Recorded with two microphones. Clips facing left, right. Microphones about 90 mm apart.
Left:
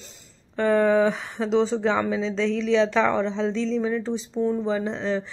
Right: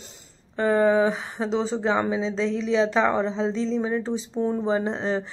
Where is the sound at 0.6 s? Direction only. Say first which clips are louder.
Even; 30° right (ahead or behind).